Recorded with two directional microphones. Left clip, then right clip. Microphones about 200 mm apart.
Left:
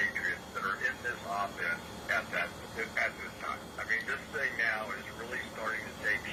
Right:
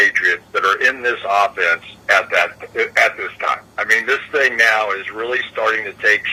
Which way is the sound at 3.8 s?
55° right (ahead or behind).